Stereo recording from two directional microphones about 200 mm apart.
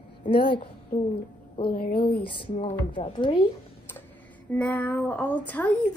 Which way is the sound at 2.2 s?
25° left (ahead or behind).